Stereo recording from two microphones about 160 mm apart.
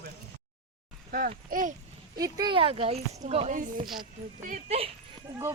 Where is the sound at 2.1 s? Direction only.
25° right (ahead or behind); by 3.6 s 40° right (ahead or behind).